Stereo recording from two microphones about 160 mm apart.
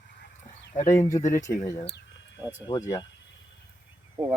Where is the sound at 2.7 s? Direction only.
20° left (ahead or behind).